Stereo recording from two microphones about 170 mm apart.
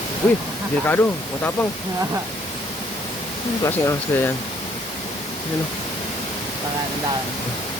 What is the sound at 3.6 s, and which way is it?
Speech, 15° left (ahead or behind).